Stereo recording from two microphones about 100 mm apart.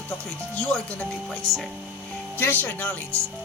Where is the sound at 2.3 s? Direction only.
20° left (ahead or behind).